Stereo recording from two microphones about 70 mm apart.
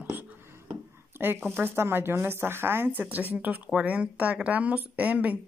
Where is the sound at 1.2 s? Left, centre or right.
Right.